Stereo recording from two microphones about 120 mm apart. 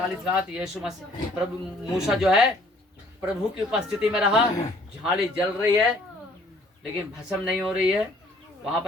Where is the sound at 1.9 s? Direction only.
5° right (ahead or behind).